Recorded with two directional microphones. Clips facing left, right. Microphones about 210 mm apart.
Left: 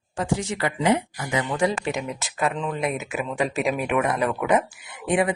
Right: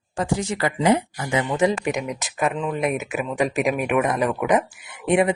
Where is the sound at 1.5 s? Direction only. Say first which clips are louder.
Right 3 dB; 15° right (ahead or behind).